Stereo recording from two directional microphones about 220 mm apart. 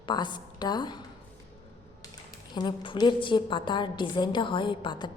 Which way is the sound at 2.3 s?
20° left (ahead or behind).